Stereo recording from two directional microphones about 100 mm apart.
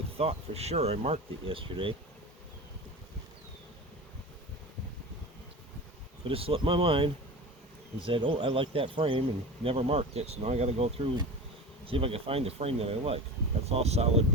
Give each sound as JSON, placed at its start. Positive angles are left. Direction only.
{"t": 0.2, "sound": "speech", "side_deg": -90}
{"t": 6.2, "sound": "speech", "side_deg": -70}
{"t": 11.9, "sound": "speech", "side_deg": -70}